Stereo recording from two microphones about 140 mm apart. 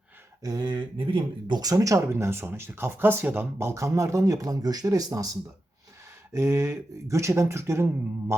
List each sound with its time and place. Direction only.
0.4 s speech: 30° right (ahead or behind)
8.3 s mantra: 20° right (ahead or behind)